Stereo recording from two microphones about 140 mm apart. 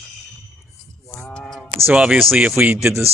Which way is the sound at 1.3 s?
5° left (ahead or behind).